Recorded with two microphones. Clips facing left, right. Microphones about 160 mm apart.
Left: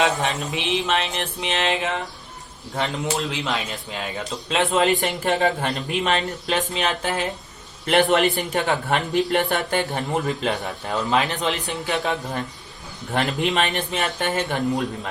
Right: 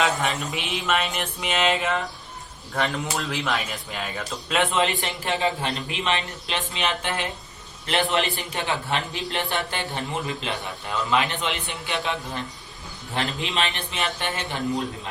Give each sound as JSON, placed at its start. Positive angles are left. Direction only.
{"t": 0.0, "sound": "a sound", "side_deg": 20}
{"t": 2.7, "sound": "a man's voice", "side_deg": 20}
{"t": 13.1, "sound": "a man's voice", "side_deg": 45}